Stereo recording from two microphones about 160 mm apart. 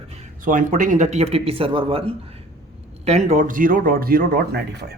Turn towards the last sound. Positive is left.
turn(degrees=-90)